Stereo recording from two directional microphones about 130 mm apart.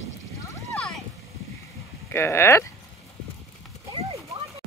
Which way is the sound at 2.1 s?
20° left (ahead or behind).